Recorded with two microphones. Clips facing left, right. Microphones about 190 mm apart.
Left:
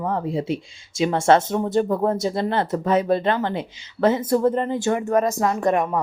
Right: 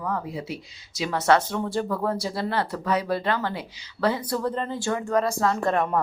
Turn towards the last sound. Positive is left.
turn(degrees=15)  # may be behind; listen again after turning